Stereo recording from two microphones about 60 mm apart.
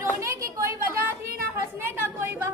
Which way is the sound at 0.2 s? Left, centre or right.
Right.